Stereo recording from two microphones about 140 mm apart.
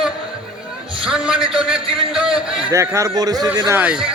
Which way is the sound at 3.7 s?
5° right (ahead or behind).